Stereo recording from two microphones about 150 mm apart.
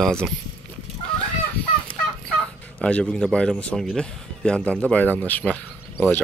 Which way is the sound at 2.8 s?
5° left (ahead or behind).